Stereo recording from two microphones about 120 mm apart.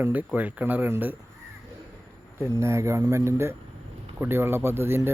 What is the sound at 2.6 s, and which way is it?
Speech, 25° right (ahead or behind).